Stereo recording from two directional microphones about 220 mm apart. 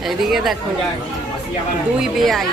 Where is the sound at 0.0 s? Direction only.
Centre (ahead or behind).